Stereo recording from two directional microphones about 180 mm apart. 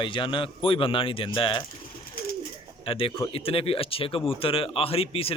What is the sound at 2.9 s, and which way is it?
Speech, 30° left (ahead or behind).